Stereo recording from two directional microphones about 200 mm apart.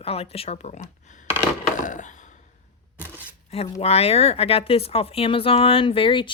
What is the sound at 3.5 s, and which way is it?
Speech, 30° left (ahead or behind).